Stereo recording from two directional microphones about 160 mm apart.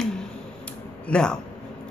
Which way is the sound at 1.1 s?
5° left (ahead or behind).